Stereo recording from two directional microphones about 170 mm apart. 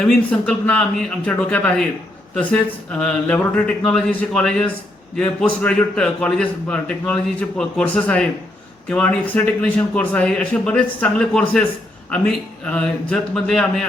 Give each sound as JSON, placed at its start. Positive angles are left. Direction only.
{"t": 0.1, "sound": "a man's voice", "side_deg": 5}